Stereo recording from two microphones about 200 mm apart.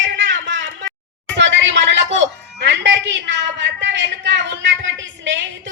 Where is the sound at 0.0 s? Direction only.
65° right (ahead or behind).